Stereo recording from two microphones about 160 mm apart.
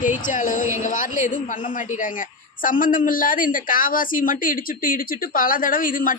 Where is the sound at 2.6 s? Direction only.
60° left (ahead or behind).